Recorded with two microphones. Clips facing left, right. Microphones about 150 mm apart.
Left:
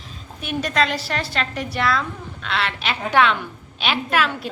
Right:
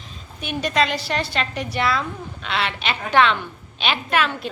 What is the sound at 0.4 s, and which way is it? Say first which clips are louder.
A woman's voice: even; centre (ahead or behind).